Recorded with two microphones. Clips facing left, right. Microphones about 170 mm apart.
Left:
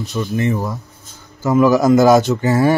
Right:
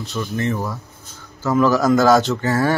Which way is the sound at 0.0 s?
15° left (ahead or behind).